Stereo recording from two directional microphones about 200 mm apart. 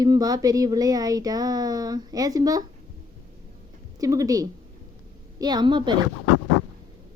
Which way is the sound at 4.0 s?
15° right (ahead or behind).